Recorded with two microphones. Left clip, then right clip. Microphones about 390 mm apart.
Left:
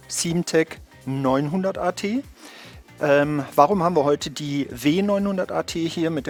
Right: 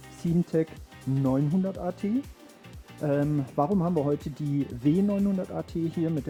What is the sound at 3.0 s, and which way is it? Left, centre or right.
Speech, centre.